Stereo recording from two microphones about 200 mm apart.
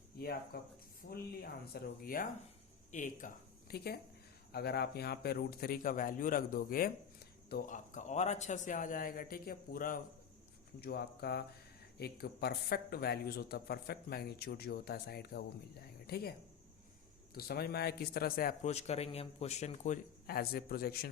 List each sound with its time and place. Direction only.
0.2 s speech: 50° left (ahead or behind)
17.3 s speech: 50° left (ahead or behind)
18.7 s a man's voice: 30° left (ahead or behind); by 21.1 s 50° left (ahead or behind)